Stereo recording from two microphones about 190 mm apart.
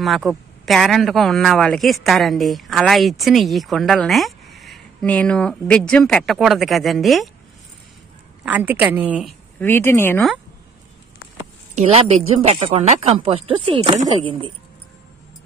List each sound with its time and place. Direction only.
0.0 s speech: centre (ahead or behind)
8.5 s a woman's voice: 10° right (ahead or behind)
9.6 s speech: 10° left (ahead or behind)
11.7 s speech: 35° right (ahead or behind)